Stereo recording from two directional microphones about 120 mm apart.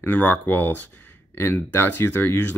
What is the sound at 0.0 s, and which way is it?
Speech, 15° left (ahead or behind).